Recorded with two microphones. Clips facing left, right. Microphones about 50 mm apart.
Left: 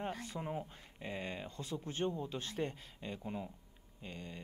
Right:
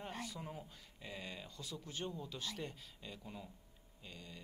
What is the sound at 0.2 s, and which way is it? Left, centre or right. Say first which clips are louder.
Speech: left 6 dB; left.